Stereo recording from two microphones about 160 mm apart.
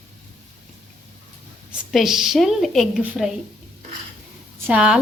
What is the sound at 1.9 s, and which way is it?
A woman's voice, centre (ahead or behind).